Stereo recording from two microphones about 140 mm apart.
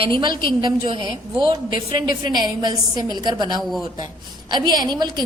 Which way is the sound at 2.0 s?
30° right (ahead or behind).